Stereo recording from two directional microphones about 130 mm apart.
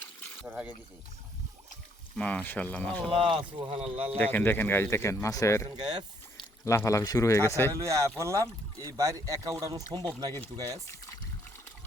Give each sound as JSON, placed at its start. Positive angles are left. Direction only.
{"t": 0.4, "sound": "speech", "side_deg": -10}
{"t": 2.1, "sound": "speech", "side_deg": 10}
{"t": 3.1, "sound": "speech", "side_deg": -45}
{"t": 4.2, "sound": "speech", "side_deg": 15}
{"t": 5.8, "sound": "speech", "side_deg": -35}
{"t": 6.7, "sound": "a man's voice", "side_deg": 20}
{"t": 8.2, "sound": "speech", "side_deg": -25}